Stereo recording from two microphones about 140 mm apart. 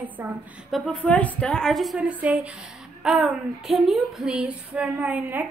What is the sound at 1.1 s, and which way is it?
A woman's voice, 10° left (ahead or behind).